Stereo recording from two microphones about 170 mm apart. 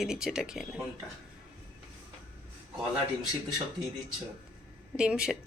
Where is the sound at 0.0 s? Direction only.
5° right (ahead or behind).